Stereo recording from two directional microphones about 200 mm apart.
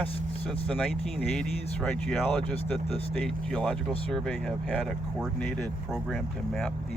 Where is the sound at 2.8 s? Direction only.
30° left (ahead or behind).